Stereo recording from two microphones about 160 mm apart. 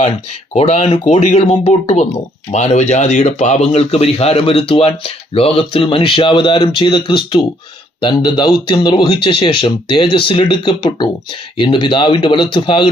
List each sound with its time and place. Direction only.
0.5 s speech: 45° left (ahead or behind)